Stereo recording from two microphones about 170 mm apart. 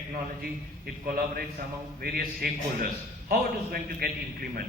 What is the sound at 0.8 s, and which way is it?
A man's voice, 60° right (ahead or behind).